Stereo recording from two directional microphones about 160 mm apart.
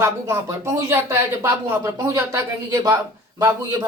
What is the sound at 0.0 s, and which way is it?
Speech, 15° right (ahead or behind).